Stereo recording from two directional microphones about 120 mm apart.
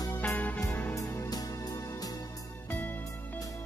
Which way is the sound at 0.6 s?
15° left (ahead or behind).